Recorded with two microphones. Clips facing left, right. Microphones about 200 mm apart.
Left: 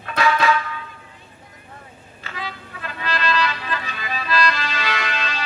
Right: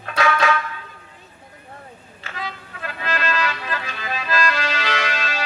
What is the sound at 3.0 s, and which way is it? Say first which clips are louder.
Music: left 1 dB; 45° right (ahead or behind).